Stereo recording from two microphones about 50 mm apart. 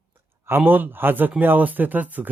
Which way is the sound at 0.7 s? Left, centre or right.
Right.